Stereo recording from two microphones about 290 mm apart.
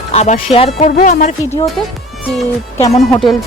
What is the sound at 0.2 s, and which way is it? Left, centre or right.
Speech, left.